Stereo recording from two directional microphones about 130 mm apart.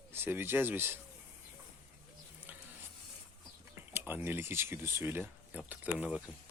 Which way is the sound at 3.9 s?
15° right (ahead or behind).